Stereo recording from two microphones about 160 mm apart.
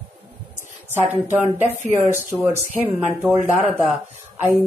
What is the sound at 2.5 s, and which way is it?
A woman's voice, 10° right (ahead or behind).